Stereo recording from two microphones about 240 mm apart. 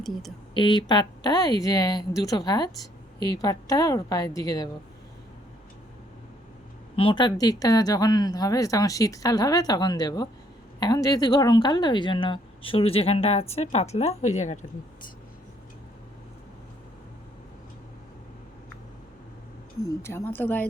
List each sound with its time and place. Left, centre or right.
0.5 s speech: centre
6.9 s speech: left
19.8 s speech: centre